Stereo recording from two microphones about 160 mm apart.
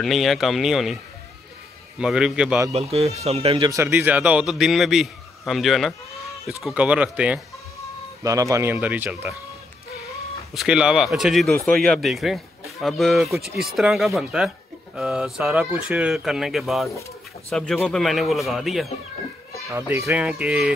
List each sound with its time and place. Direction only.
0.0 s speech: centre (ahead or behind)
2.0 s speech: 5° right (ahead or behind)
2.7 s speech: 40° right (ahead or behind)
3.7 s speech: 15° right (ahead or behind)
8.2 s speech: 20° right (ahead or behind)
10.5 s speech: 5° right (ahead or behind)
19.7 s speech: 15° right (ahead or behind)
20.2 s speech: 5° right (ahead or behind)